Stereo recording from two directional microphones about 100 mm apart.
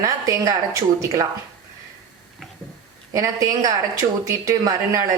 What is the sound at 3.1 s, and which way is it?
Speech, 35° right (ahead or behind).